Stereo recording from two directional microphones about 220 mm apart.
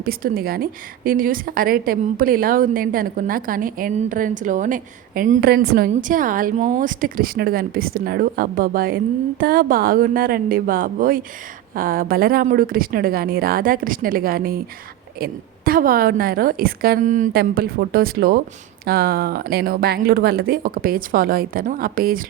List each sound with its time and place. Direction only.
0.0 s a woman's voice: 40° right (ahead or behind)